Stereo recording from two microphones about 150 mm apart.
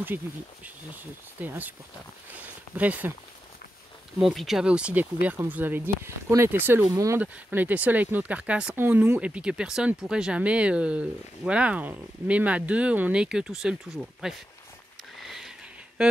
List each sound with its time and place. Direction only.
1.4 s speech: 10° right (ahead or behind)
4.2 s speech: centre (ahead or behind)
15.2 s a sound: 5° right (ahead or behind)